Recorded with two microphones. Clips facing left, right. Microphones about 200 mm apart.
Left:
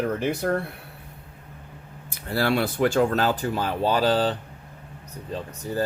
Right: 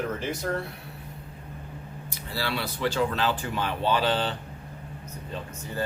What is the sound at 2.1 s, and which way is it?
Speech, 55° left (ahead or behind).